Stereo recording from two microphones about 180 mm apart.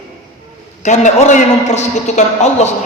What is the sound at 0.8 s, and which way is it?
A man's voice, 40° left (ahead or behind).